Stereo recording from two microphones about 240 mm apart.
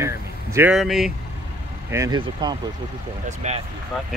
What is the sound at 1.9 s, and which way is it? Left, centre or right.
Speech, centre.